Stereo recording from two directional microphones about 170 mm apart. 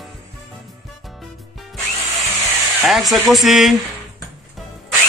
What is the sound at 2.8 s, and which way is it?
Speech, centre (ahead or behind).